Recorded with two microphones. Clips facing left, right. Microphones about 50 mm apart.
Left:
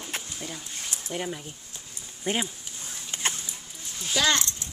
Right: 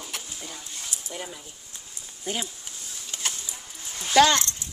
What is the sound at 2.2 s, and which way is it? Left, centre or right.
Speech, left.